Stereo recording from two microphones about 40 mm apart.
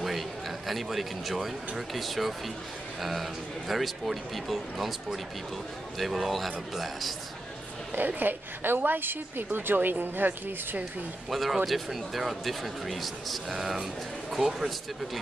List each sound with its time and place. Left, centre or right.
0.0 s a sound: centre
1.8 s speech: centre
8.2 s a woman's voice: right
11.2 s speech: centre